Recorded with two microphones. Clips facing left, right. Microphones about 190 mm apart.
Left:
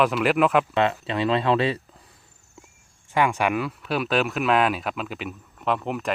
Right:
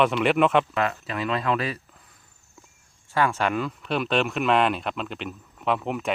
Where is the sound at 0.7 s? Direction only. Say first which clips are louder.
Left 4 dB; 25° left (ahead or behind).